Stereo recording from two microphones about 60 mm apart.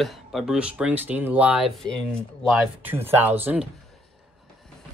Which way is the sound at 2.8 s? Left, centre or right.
Right.